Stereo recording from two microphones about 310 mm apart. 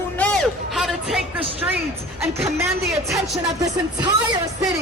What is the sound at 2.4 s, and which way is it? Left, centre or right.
Speech, centre.